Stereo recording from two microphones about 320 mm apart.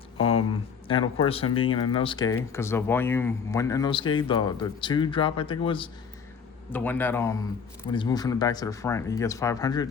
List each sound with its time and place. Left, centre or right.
1.2 s speech: centre
6.7 s speech: centre